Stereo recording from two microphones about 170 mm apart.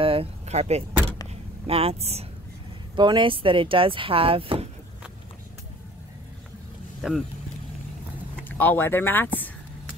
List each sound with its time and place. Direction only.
0.0 s a sound: 35° right (ahead or behind)
1.7 s speech: 35° right (ahead or behind)
3.0 s speech: 30° right (ahead or behind)
7.0 s speech: centre (ahead or behind)
8.5 s speech: 10° left (ahead or behind)